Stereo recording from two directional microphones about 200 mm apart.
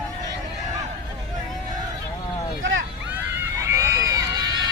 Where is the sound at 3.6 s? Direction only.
15° right (ahead or behind).